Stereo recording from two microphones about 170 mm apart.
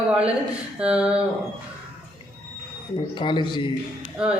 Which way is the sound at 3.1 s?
25° left (ahead or behind).